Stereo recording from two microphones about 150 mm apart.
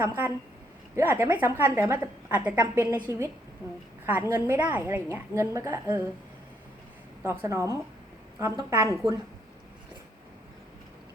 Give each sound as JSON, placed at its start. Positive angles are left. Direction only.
{"t": 0.0, "sound": "a woman's voice", "side_deg": -15}
{"t": 7.2, "sound": "a woman's voice", "side_deg": -15}